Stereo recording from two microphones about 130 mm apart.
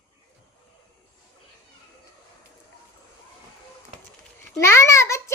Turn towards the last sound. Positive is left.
turn(degrees=20)  # may be behind; listen again after turning